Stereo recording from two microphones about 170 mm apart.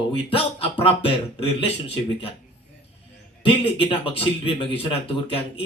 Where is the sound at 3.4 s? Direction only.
35° left (ahead or behind).